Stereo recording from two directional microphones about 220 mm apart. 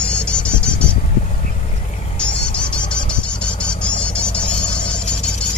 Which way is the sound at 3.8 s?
5° left (ahead or behind).